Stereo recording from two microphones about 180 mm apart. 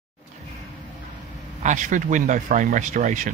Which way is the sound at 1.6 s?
45° right (ahead or behind).